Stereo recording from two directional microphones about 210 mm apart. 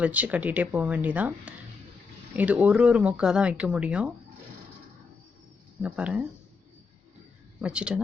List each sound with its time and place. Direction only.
0.0 s speech: 5° right (ahead or behind)
5.8 s speech: 5° right (ahead or behind)
7.6 s speech: 5° right (ahead or behind)